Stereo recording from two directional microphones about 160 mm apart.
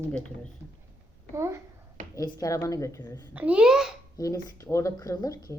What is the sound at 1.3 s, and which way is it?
Speech, 15° right (ahead or behind).